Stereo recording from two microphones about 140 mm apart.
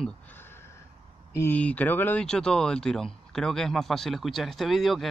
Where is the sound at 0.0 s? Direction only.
15° left (ahead or behind).